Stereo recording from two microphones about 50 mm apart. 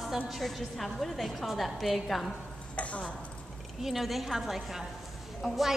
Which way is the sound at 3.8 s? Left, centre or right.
Centre.